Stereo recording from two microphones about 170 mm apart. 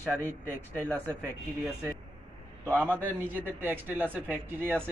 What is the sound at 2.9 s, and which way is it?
A man's voice, 10° right (ahead or behind).